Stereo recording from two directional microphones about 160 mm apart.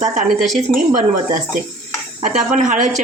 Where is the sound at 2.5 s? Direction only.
50° right (ahead or behind).